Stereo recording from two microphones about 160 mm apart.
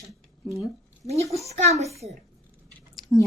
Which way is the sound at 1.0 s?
40° right (ahead or behind).